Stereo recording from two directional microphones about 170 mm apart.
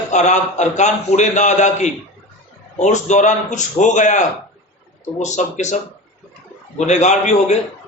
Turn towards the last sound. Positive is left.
turn(degrees=40)  # may be behind; listen again after turning